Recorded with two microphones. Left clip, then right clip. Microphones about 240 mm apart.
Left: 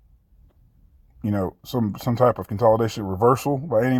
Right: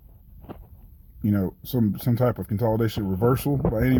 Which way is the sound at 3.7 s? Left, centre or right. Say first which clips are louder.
Left 7 dB; left.